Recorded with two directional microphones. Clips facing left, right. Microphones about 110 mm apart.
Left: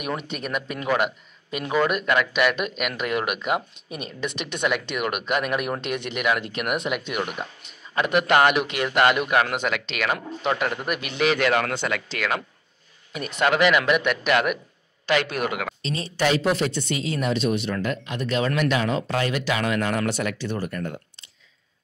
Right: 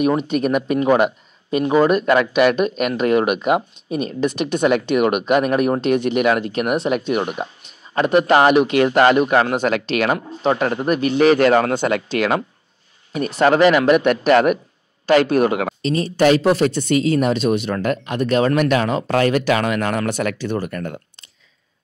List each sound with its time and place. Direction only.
0.2 s a man's voice: 45° right (ahead or behind)
16.0 s speech: 50° right (ahead or behind); by 21.3 s 65° right (ahead or behind)